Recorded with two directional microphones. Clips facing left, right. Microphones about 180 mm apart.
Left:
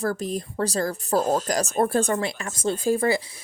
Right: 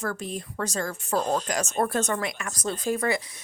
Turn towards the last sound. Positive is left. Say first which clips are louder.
# left 4 dB
turn(degrees=30)  # may be behind; listen again after turning